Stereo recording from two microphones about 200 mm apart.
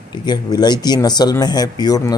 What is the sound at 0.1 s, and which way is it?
Speech, 20° left (ahead or behind).